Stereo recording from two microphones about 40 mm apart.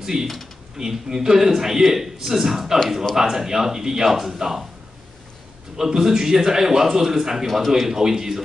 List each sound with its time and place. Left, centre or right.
0.0 s a man's voice: centre
5.8 s a man's voice: centre